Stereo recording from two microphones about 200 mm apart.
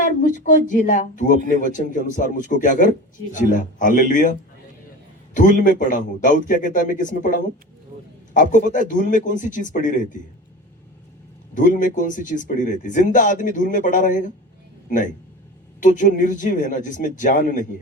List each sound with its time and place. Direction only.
0.0 s speech: 40° left (ahead or behind)
11.5 s speech: 40° left (ahead or behind)